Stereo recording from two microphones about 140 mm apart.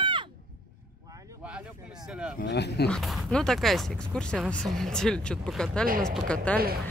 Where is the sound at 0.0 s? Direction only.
35° right (ahead or behind).